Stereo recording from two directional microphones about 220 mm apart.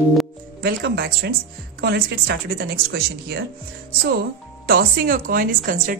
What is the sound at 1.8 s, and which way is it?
Speech, 45° right (ahead or behind).